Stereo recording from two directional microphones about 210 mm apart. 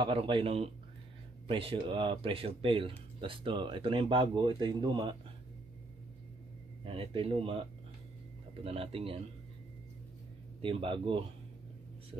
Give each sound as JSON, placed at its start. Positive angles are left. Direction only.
{"t": 0.0, "sound": "speech", "side_deg": -25}
{"t": 6.8, "sound": "speech", "side_deg": -25}
{"t": 8.6, "sound": "speech", "side_deg": -25}
{"t": 10.6, "sound": "speech", "side_deg": -25}